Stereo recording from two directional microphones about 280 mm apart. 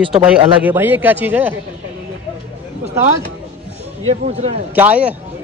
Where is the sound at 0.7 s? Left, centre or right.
Centre.